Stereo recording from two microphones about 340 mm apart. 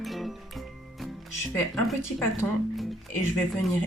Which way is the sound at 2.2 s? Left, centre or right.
Centre.